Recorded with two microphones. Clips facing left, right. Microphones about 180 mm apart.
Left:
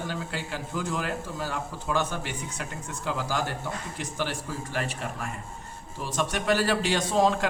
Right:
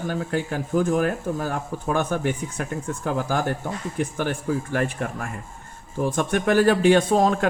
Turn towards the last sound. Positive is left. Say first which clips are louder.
# right 5 dB
turn(degrees=-50)  # may be behind; listen again after turning